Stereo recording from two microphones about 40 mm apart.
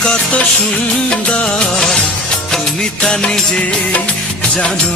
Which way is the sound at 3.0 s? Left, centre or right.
Left.